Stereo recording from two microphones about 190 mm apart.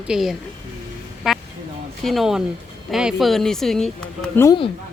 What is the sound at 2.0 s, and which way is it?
Speech, centre (ahead or behind).